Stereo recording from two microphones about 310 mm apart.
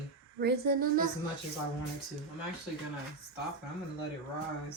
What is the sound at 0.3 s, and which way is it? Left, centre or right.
Speech, right.